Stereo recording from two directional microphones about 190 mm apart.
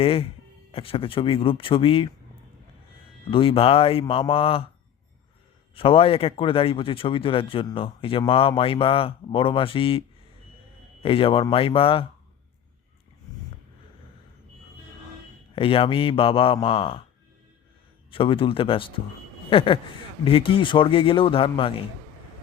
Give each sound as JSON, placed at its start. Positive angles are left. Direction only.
{"t": 0.0, "sound": "speech", "side_deg": 30}
{"t": 3.2, "sound": "speech", "side_deg": 30}
{"t": 5.7, "sound": "speech", "side_deg": 30}
{"t": 11.0, "sound": "speech", "side_deg": 30}
{"t": 15.5, "sound": "speech", "side_deg": 30}
{"t": 18.1, "sound": "speech", "side_deg": 25}